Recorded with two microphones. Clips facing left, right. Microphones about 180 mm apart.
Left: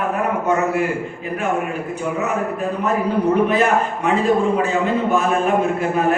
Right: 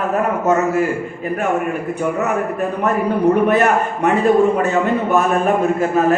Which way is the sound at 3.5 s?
60° right (ahead or behind).